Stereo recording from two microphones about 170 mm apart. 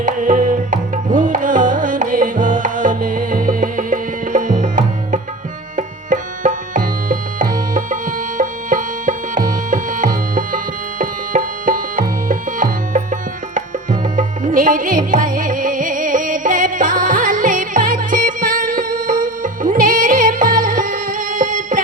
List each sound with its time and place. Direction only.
0.0 s music: 50° right (ahead or behind)
5.7 s tabla: 50° right (ahead or behind)
8.4 s music: 50° right (ahead or behind)